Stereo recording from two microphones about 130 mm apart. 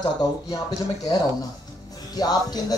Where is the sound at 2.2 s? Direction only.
30° left (ahead or behind).